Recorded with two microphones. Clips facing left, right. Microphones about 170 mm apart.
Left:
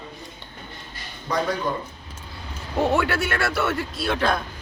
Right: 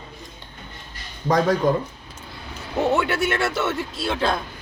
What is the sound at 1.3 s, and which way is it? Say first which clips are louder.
Speech: right 6 dB; 55° right (ahead or behind).